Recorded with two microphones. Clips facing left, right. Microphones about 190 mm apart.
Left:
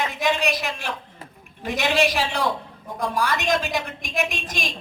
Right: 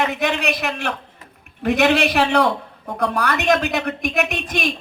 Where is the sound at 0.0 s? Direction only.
60° right (ahead or behind).